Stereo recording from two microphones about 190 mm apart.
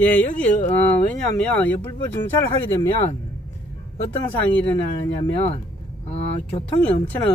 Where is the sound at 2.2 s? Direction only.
10° left (ahead or behind).